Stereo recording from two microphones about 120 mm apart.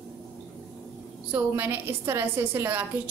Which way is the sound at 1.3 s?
15° right (ahead or behind).